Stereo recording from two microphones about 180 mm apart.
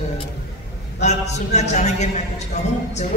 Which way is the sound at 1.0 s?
40° left (ahead or behind).